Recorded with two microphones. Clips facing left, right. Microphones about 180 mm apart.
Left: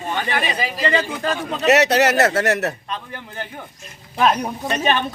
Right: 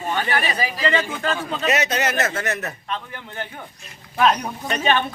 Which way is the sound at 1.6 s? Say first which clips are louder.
Left 8 dB; 70° left (ahead or behind).